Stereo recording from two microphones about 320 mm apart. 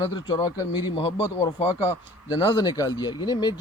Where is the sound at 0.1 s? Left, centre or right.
Centre.